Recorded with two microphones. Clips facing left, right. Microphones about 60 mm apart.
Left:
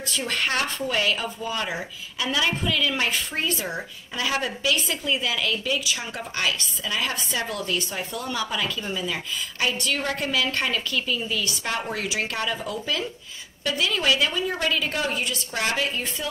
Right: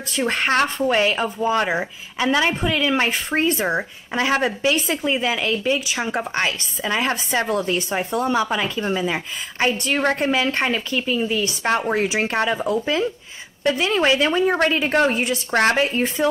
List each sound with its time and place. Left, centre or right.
0.1 s a woman's voice: right
15.5 s speech: right